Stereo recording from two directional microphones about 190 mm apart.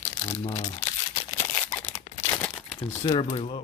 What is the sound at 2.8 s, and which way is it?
Speech, 20° left (ahead or behind).